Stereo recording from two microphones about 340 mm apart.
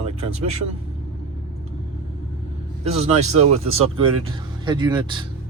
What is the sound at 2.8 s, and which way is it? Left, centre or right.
Speech, centre.